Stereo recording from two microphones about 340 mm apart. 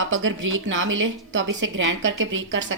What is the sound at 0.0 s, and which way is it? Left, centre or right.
Speech, right.